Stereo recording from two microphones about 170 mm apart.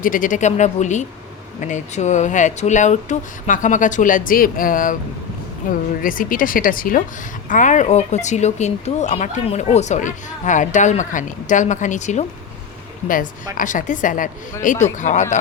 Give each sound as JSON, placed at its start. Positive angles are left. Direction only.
{"t": 0.0, "sound": "speech", "side_deg": 50}
{"t": 6.0, "sound": "speech", "side_deg": 55}
{"t": 13.6, "sound": "speech", "side_deg": 50}